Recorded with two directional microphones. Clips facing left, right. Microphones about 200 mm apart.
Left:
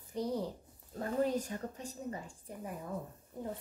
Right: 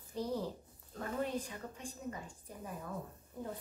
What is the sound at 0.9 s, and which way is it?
A woman's voice, 35° left (ahead or behind).